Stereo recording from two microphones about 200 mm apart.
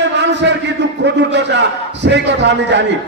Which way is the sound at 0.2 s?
60° right (ahead or behind).